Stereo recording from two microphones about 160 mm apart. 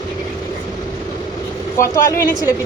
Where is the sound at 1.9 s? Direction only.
25° left (ahead or behind).